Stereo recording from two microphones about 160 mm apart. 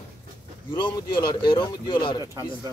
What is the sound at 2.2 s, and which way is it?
Speech, 20° right (ahead or behind).